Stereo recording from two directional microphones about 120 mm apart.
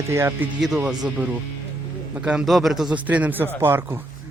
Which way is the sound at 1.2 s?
15° right (ahead or behind).